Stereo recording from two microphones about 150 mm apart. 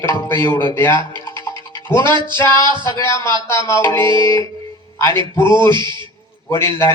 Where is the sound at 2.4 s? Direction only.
20° left (ahead or behind).